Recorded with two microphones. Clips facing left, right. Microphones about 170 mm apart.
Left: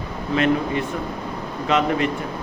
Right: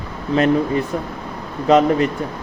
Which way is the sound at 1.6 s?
40° right (ahead or behind).